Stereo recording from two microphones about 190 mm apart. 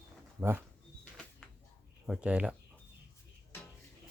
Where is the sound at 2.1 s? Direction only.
5° right (ahead or behind).